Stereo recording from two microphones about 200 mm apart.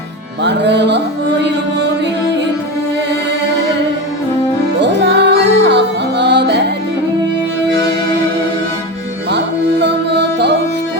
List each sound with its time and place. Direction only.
0.4 s music: 60° right (ahead or behind)
4.8 s music: 60° right (ahead or behind)
9.8 s music: 60° right (ahead or behind)